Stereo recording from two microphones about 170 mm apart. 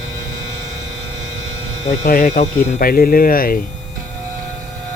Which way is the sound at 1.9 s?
45° left (ahead or behind).